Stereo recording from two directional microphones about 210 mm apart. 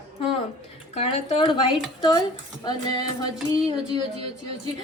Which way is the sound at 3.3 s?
5° right (ahead or behind).